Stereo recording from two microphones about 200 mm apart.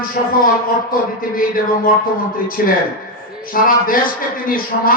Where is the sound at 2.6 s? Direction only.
50° left (ahead or behind).